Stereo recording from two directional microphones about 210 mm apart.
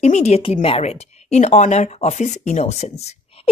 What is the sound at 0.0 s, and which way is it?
A woman's voice, 30° left (ahead or behind).